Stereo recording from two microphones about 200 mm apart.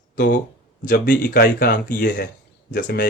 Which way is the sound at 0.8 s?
55° left (ahead or behind).